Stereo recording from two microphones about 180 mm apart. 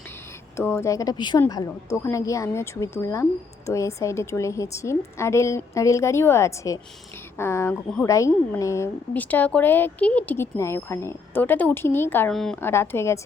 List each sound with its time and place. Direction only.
0.5 s a woman's voice: 15° left (ahead or behind)
12.3 s a woman's voice: centre (ahead or behind)
12.5 s a woman's voice: 15° left (ahead or behind)